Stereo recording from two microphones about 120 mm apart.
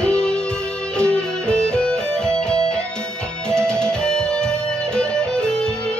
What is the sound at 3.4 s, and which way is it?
Music, 5° left (ahead or behind).